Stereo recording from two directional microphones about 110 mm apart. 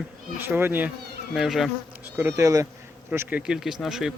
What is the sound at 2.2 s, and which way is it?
Speech, 25° right (ahead or behind).